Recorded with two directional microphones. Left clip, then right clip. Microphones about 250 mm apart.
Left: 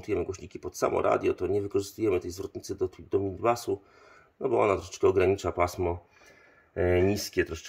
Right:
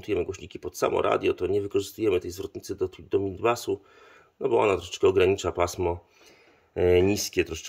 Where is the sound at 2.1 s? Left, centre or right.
Centre.